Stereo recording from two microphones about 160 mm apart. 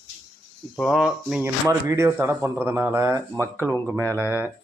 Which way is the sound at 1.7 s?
15° right (ahead or behind).